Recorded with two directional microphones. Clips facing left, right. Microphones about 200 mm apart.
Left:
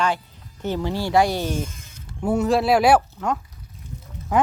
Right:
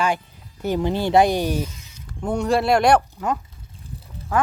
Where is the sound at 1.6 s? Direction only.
50° left (ahead or behind).